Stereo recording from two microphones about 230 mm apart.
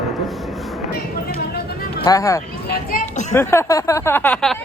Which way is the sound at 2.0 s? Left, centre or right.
Centre.